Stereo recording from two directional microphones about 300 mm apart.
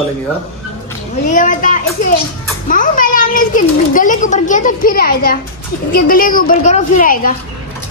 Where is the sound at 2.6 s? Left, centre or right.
Left.